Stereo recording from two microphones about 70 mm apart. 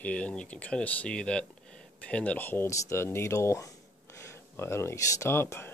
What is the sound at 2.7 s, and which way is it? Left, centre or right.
Speech, left.